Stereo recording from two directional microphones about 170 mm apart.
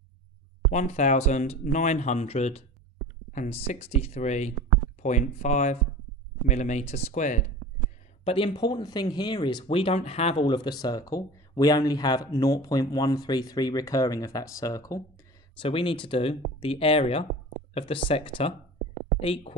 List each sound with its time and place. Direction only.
0.7 s speech: 45° left (ahead or behind)
8.2 s speech: 30° left (ahead or behind)
10.4 s speech: 25° left (ahead or behind)
15.6 s speech: 30° left (ahead or behind)